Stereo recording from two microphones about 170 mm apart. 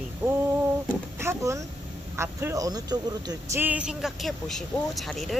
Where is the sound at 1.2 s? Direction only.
15° right (ahead or behind).